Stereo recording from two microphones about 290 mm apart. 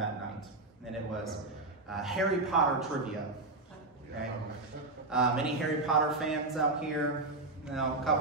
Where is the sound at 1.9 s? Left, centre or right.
Centre.